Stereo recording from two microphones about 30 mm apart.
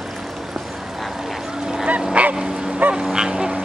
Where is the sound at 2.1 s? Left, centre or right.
Right.